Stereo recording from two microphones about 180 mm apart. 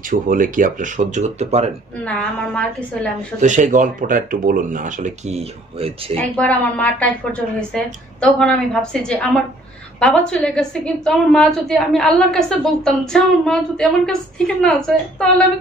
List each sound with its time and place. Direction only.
0.0 s speech: 50° right (ahead or behind)
2.0 s a woman's voice: 5° left (ahead or behind)
3.3 s speech: 45° right (ahead or behind)
6.1 s a woman's voice: 10° left (ahead or behind)